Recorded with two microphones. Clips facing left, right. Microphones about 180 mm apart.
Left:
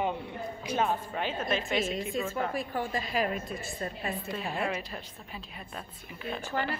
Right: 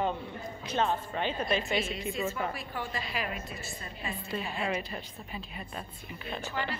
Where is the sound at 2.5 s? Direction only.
50° left (ahead or behind).